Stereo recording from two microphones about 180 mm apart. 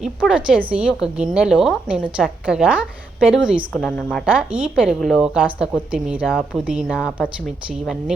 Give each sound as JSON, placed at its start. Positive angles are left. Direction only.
{"t": 0.0, "sound": "a woman's voice", "side_deg": -5}
{"t": 3.7, "sound": "a woman's voice", "side_deg": 5}
{"t": 4.5, "sound": "a woman's voice", "side_deg": -5}